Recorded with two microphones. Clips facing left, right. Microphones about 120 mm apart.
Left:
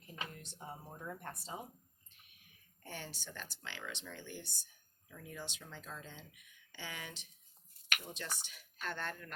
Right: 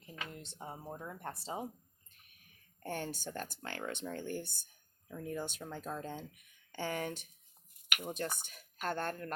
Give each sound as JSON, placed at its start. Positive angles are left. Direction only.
{"t": 0.3, "sound": "speech", "side_deg": -25}
{"t": 2.8, "sound": "speech", "side_deg": -50}